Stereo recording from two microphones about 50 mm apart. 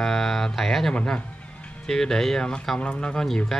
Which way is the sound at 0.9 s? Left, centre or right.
Left.